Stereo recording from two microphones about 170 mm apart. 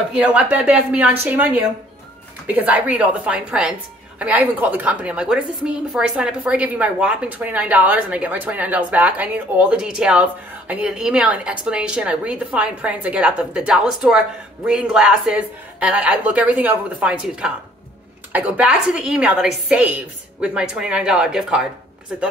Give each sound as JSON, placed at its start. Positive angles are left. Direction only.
{"t": 0.1, "sound": "a woman's voice", "side_deg": -10}